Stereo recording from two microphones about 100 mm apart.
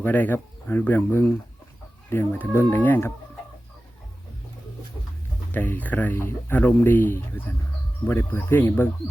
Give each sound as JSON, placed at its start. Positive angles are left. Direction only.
{"t": 0.0, "sound": "speech", "side_deg": 20}
{"t": 5.5, "sound": "speech", "side_deg": 20}